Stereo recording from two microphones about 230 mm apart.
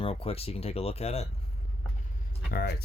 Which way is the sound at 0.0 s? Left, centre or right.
Left.